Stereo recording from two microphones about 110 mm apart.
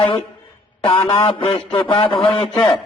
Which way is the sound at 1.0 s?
50° left (ahead or behind).